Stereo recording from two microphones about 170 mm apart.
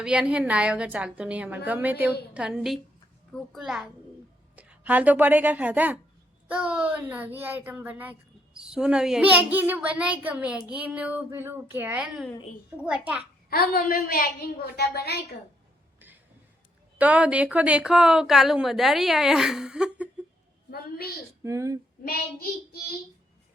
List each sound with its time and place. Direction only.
0.0 s a child's voice: 5° right (ahead or behind)
13.5 s a woman's voice: 60° left (ahead or behind)
17.0 s a woman's voice: 10° right (ahead or behind)
20.7 s a woman's voice: 65° left (ahead or behind)
21.4 s speech: 20° right (ahead or behind)
22.0 s a woman's voice: 65° left (ahead or behind)